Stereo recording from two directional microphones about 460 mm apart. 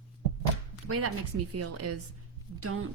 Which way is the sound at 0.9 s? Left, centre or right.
Right.